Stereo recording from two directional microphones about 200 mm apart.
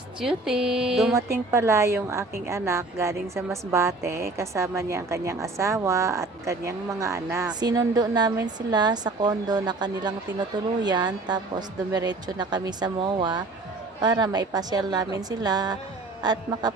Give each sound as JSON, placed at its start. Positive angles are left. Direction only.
{"t": 0.2, "sound": "speech", "side_deg": -5}
{"t": 1.1, "sound": "a woman's voice", "side_deg": -15}